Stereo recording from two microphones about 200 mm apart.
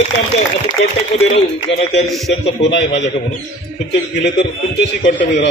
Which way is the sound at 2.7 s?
60° left (ahead or behind).